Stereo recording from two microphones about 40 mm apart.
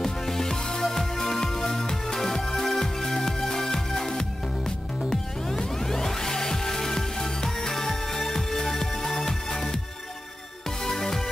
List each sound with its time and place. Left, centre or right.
0.0 s music: centre
10.8 s music: centre